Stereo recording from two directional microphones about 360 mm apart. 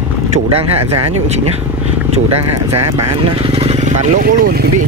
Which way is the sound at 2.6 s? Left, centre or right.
Right.